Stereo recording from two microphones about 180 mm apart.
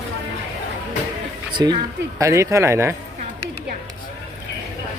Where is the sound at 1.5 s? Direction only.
25° right (ahead or behind).